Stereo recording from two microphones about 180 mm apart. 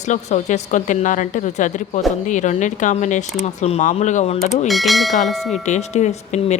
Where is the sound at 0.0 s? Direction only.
40° left (ahead or behind).